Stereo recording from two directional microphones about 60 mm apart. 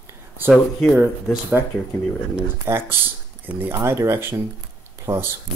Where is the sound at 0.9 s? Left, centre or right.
Right.